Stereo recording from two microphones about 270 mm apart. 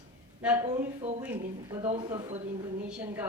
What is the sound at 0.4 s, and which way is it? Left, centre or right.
Speech, centre.